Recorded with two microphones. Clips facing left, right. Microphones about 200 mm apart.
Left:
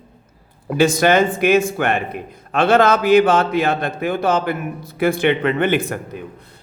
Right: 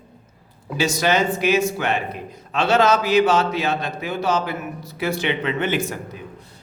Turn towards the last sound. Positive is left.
turn(degrees=55)  # may be behind; listen again after turning